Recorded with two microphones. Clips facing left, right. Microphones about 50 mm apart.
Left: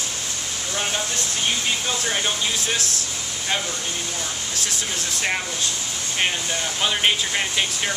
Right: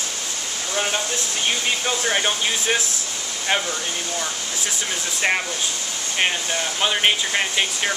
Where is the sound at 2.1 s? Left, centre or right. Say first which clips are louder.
Right 3 dB; right.